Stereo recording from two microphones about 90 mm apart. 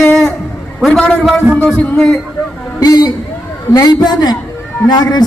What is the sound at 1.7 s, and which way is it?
Speech, 25° left (ahead or behind).